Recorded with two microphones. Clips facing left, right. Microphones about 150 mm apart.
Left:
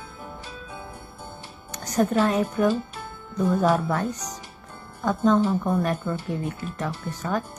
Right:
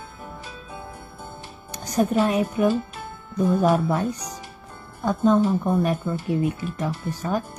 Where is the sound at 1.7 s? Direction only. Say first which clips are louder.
Right 1 dB; 10° right (ahead or behind).